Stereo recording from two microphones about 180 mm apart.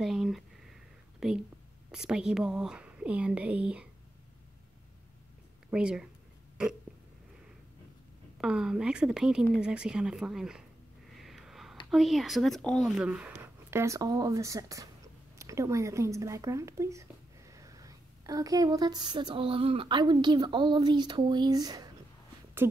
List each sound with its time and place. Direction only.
0.0 s a sound: centre (ahead or behind)
1.2 s speech: 5° right (ahead or behind)
5.7 s speech: 5° right (ahead or behind)
8.4 s speech: 5° right (ahead or behind)
11.1 s a sound: centre (ahead or behind)
11.9 s a woman's voice: centre (ahead or behind)